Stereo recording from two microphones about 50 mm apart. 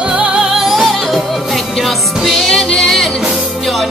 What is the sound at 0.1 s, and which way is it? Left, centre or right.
Music, centre.